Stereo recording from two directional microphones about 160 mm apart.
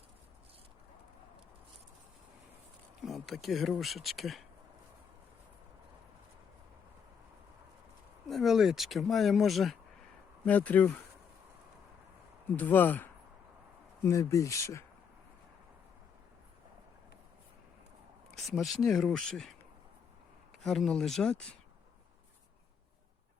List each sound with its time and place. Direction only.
3.0 s speech: centre (ahead or behind)
8.3 s speech: centre (ahead or behind)
12.5 s speech: 10° left (ahead or behind)
18.4 s speech: centre (ahead or behind)
20.6 s speech: centre (ahead or behind)